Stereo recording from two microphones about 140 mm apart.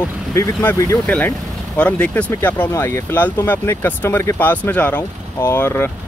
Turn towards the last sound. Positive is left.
turn(degrees=15)  # may be behind; listen again after turning